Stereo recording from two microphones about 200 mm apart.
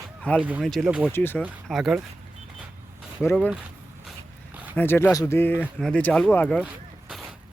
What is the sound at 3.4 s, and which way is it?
Speech, 5° right (ahead or behind).